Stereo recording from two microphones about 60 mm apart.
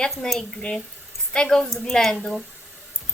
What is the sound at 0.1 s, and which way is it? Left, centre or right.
Speech, centre.